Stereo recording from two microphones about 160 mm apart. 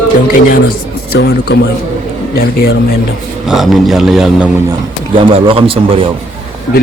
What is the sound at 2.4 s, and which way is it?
Speech, 70° left (ahead or behind).